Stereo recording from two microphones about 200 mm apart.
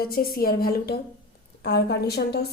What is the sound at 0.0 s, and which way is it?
A woman's voice, 50° left (ahead or behind).